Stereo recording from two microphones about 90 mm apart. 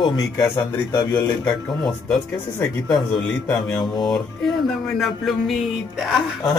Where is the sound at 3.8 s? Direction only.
50° left (ahead or behind).